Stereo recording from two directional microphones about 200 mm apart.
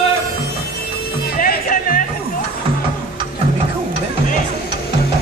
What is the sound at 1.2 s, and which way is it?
Music, 50° left (ahead or behind).